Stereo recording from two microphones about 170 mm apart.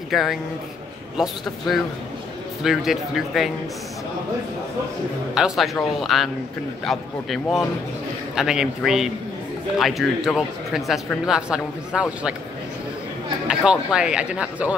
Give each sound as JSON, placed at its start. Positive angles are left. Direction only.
{"t": 0.1, "sound": "speech", "side_deg": 0}
{"t": 5.3, "sound": "speech", "side_deg": -5}
{"t": 13.5, "sound": "speech", "side_deg": -5}